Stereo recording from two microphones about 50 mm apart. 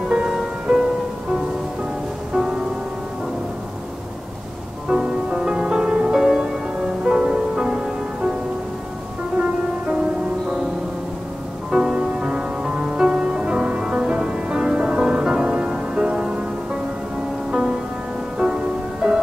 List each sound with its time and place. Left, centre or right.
0.1 s music: centre
2.3 s music: centre
4.8 s music: centre
11.7 s music: centre